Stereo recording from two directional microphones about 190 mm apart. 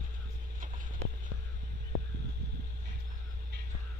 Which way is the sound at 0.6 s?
45° right (ahead or behind).